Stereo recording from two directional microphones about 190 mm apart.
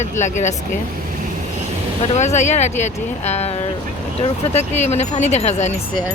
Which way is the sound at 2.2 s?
40° left (ahead or behind).